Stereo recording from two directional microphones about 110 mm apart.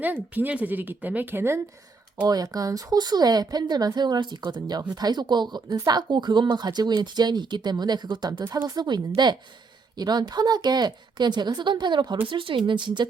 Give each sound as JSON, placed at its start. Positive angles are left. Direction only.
{"t": 0.0, "sound": "a woman's voice", "side_deg": -15}
{"t": 2.2, "sound": "a woman's voice", "side_deg": -35}